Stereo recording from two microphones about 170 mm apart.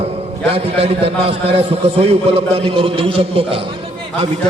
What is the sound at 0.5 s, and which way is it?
A man's voice, 35° right (ahead or behind).